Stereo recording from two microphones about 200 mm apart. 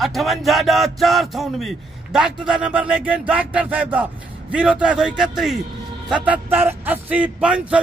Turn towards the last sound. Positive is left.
turn(degrees=-5)  # may be behind; listen again after turning